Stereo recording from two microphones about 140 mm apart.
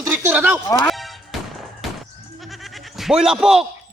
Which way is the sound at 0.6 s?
25° left (ahead or behind).